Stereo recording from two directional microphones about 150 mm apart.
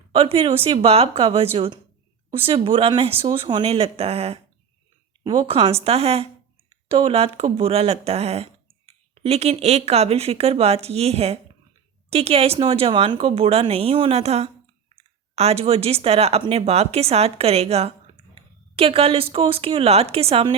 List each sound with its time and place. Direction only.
0.1 s speech: 40° right (ahead or behind)
5.2 s speech: 30° right (ahead or behind)